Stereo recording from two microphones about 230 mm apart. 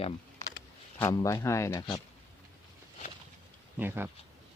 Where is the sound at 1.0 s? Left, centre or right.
Centre.